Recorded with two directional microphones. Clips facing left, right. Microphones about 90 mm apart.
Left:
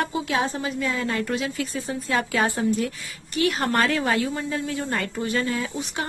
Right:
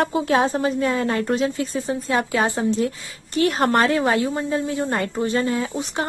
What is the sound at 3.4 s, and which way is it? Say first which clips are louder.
A woman's voice: right 4 dB; 35° right (ahead or behind).